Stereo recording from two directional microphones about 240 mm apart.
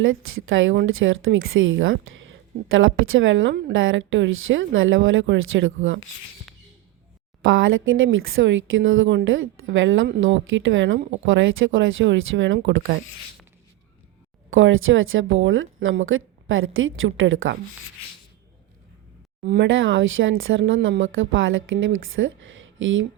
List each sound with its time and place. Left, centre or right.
0.0 s a woman's voice: right
7.4 s speech: right
14.5 s a woman's voice: right
19.4 s speech: right